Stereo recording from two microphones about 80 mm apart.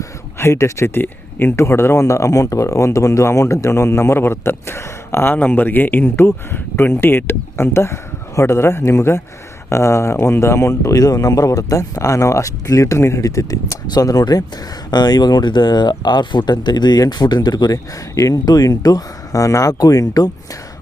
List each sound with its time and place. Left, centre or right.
0.0 s speech: left
18.1 s speech: left